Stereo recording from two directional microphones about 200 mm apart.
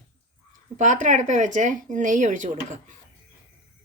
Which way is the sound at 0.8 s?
35° right (ahead or behind).